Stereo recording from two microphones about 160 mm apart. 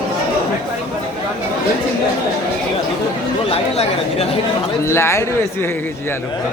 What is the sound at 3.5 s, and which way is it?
Chatter, 40° left (ahead or behind).